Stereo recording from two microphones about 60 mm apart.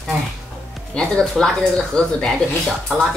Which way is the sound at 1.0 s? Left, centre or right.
Centre.